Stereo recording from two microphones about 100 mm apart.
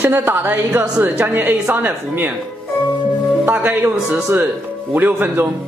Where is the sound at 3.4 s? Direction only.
20° right (ahead or behind).